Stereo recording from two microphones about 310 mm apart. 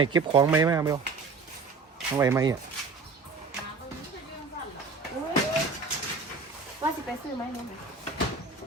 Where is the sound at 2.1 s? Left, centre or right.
Centre.